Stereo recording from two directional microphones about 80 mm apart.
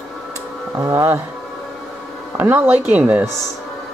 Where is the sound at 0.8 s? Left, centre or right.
Right.